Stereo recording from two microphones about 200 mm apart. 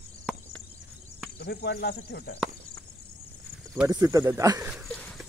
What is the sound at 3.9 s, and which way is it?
Speech, 15° right (ahead or behind).